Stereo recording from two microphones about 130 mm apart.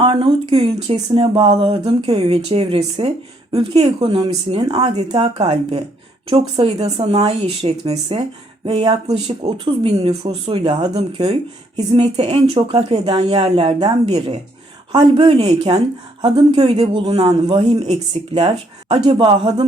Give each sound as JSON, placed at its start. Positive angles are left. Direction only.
{"t": 0.0, "sound": "speech", "side_deg": -40}
{"t": 7.0, "sound": "speech", "side_deg": -50}
{"t": 9.4, "sound": "speech", "side_deg": -30}
{"t": 9.8, "sound": "speech", "side_deg": -45}
{"t": 10.9, "sound": "speech", "side_deg": -45}
{"t": 17.8, "sound": "speech", "side_deg": -50}